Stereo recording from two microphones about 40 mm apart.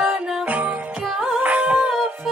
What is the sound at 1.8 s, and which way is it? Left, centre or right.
Music, centre.